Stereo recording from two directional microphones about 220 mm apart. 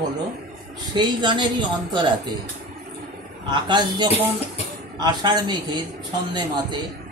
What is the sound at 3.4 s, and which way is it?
Speech, 20° right (ahead or behind).